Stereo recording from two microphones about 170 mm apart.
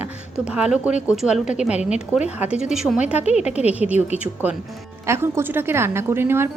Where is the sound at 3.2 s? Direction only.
40° left (ahead or behind).